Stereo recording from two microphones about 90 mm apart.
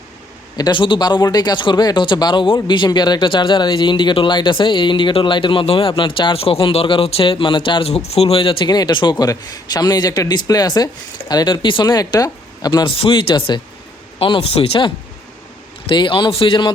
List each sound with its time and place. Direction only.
0.7 s speech: 65° left (ahead or behind); by 8.5 s 90° left
8.6 s a man's voice: 50° left (ahead or behind)
12.8 s speech: 70° left (ahead or behind)
14.2 s speech: 80° left
15.9 s speech: 65° left (ahead or behind)